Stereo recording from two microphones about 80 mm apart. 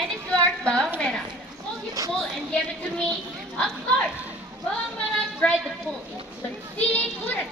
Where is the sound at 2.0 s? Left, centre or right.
Right.